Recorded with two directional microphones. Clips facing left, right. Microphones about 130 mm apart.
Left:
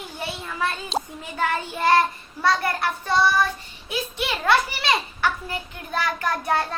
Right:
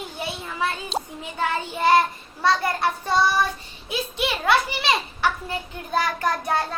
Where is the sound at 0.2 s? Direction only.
15° right (ahead or behind).